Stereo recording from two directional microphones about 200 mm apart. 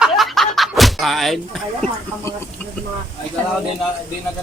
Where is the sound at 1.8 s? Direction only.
5° left (ahead or behind).